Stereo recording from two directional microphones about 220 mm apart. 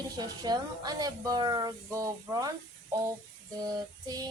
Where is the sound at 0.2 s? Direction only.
20° right (ahead or behind).